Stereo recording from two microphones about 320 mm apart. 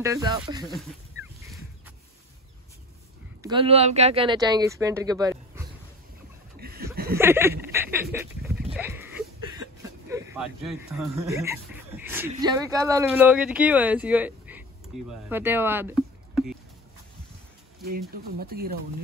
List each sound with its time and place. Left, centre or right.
0.0 s speech: centre
3.4 s speech: centre
6.6 s chuckle: right
7.2 s speech: centre
7.7 s a sound: centre
8.7 s speech: centre
18.1 s speech: right